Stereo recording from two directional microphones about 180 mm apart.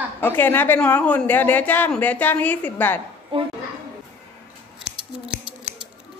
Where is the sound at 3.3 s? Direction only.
30° right (ahead or behind).